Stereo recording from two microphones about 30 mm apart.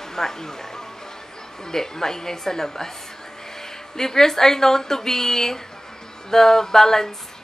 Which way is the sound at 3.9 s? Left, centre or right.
Centre.